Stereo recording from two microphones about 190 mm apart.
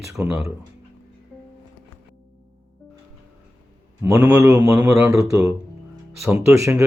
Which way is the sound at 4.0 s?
15° right (ahead or behind).